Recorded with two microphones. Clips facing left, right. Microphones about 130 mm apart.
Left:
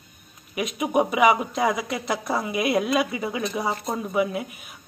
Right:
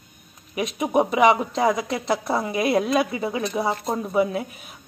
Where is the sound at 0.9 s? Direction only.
25° right (ahead or behind).